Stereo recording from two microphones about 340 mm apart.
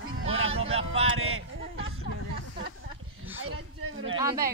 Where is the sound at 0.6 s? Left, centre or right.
Centre.